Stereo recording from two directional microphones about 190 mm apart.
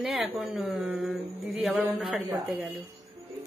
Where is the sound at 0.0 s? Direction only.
Centre (ahead or behind).